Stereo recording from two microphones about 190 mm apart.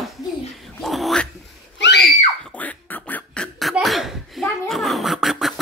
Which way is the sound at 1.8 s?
65° left (ahead or behind).